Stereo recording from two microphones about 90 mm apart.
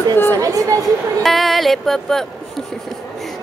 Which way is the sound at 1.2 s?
Centre (ahead or behind).